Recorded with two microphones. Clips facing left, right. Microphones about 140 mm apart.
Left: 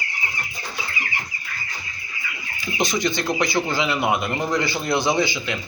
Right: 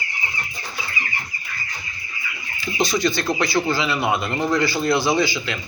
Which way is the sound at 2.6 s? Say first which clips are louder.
Right 2 dB; 20° left (ahead or behind).